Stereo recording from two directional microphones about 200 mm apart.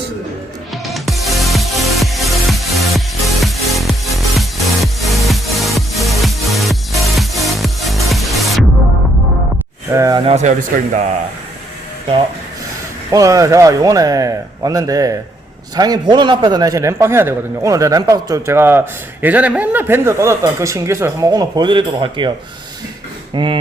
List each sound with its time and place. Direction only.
0.7 s music: centre (ahead or behind)
9.9 s speech: 20° right (ahead or behind); by 11.1 s 40° right (ahead or behind)
13.1 s a man's voice: 15° right (ahead or behind)
23.3 s speech: 25° right (ahead or behind)